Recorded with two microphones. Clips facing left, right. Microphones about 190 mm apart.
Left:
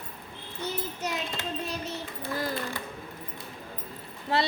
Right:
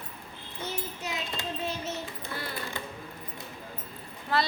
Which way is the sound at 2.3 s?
40° left (ahead or behind).